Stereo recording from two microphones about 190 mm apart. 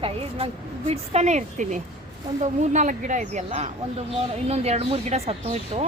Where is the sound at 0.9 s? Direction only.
35° right (ahead or behind).